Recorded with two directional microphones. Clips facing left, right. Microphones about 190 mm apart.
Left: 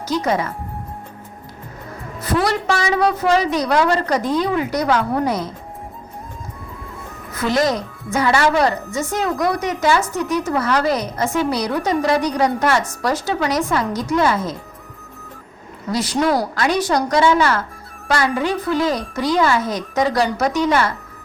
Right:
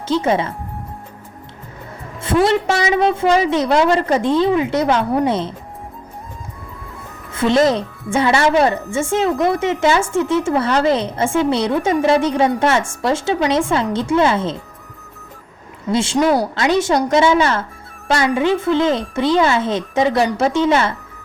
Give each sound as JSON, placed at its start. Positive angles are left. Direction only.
{"t": 0.1, "sound": "a woman's voice", "side_deg": -25}
{"t": 2.2, "sound": "a woman's voice", "side_deg": -25}
{"t": 7.3, "sound": "a woman's voice", "side_deg": -25}
{"t": 15.9, "sound": "a woman's voice", "side_deg": -25}